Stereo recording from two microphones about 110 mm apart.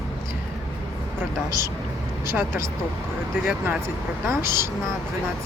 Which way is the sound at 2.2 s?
20° right (ahead or behind).